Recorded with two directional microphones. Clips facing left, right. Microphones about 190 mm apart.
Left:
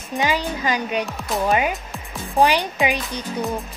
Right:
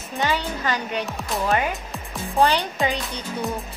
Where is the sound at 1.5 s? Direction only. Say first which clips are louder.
Left 2 dB; 15° left (ahead or behind).